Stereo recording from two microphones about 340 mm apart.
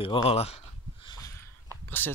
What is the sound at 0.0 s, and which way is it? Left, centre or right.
Speech, centre.